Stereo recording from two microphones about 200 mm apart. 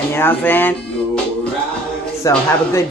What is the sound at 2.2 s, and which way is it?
Speech, 15° left (ahead or behind).